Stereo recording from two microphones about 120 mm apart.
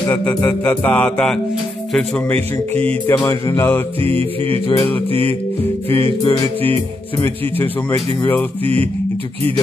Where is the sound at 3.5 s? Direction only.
20° left (ahead or behind).